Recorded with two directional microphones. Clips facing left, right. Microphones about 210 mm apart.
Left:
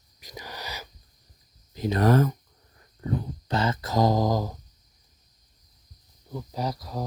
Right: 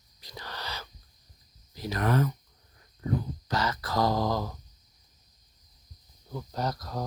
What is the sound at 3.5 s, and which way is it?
Speech, 25° left (ahead or behind).